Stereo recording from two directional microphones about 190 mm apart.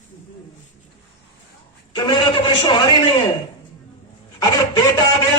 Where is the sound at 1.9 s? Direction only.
25° left (ahead or behind).